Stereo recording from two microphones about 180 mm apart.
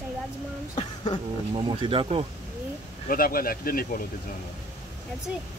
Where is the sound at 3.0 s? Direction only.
55° left (ahead or behind).